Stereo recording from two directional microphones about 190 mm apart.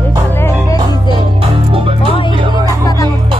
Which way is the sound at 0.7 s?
20° left (ahead or behind).